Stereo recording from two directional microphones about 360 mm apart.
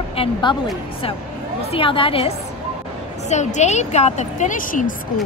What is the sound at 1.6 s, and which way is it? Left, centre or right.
A woman's voice, centre.